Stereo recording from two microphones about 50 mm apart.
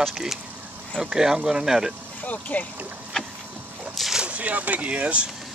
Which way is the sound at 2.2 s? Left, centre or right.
Left.